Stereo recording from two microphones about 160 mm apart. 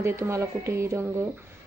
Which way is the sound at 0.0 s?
15° right (ahead or behind).